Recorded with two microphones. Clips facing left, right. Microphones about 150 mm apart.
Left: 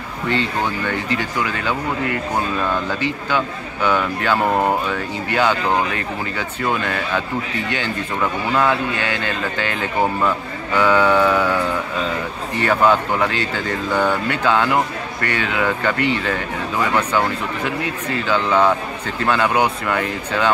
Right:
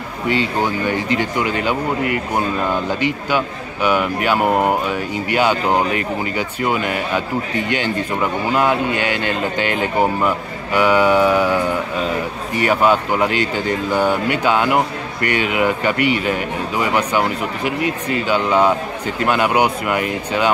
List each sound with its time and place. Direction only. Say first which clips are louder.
0.3 s a man's voice: right 3 dB; 10° right (ahead or behind)
1.1 s a man's voice: right 3 dB; 20° right (ahead or behind)